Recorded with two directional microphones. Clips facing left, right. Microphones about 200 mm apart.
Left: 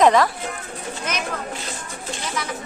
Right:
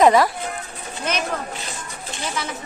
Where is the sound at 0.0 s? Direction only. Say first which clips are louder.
Right 1 dB; 10° right (ahead or behind).